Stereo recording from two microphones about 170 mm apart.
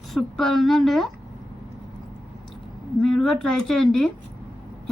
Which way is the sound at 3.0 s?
Centre (ahead or behind).